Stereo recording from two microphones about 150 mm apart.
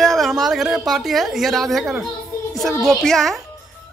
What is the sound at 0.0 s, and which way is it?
A woman's voice, centre (ahead or behind).